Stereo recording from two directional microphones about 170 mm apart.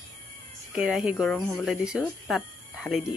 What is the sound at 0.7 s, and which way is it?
Speech, 5° right (ahead or behind).